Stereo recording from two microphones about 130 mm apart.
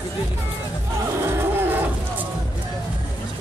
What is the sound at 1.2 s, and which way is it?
Music, 20° right (ahead or behind).